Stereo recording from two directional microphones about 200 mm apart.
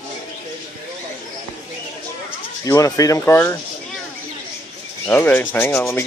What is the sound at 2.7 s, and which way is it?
Rub, 15° left (ahead or behind).